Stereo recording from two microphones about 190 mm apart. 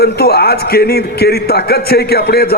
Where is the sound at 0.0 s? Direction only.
55° left (ahead or behind).